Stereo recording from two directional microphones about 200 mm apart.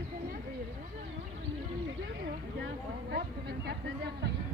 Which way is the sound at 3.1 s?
55° right (ahead or behind).